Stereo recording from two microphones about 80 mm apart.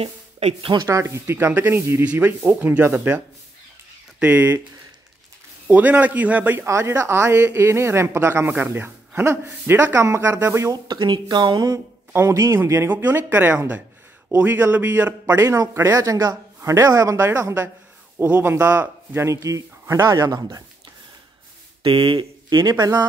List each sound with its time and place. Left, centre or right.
0.6 s speech: right
0.8 s speech: right
2.0 s speech: centre
4.2 s speech: centre
5.7 s speech: centre
6.7 s speech: right
10.7 s speech: right
12.1 s a man's voice: right
15.4 s a man's voice: right
17.2 s speech: right
18.1 s a man's voice: right
19.3 s a man's voice: right
21.8 s speech: right
22.7 s speech: right